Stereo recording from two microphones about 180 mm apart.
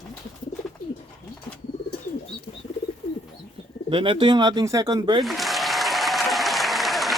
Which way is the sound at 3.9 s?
30° right (ahead or behind).